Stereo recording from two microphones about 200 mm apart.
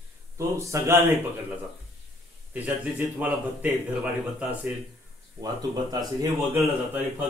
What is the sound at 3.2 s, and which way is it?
Speech, 5° right (ahead or behind).